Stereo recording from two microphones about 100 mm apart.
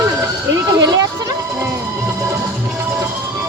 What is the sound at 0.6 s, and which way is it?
Speech, 40° right (ahead or behind).